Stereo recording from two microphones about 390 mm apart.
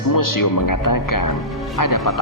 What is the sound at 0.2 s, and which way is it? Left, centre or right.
Speech, left.